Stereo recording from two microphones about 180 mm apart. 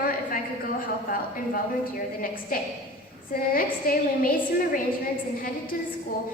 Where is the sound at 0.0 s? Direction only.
55° left (ahead or behind).